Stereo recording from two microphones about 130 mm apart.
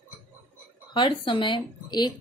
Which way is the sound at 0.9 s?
35° left (ahead or behind).